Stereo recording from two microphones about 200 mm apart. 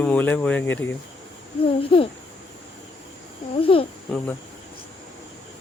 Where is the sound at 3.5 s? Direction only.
25° left (ahead or behind).